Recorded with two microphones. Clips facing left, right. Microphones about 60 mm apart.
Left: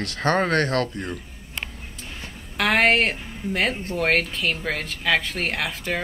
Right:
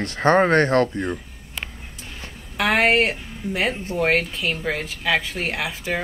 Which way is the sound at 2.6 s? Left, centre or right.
Centre.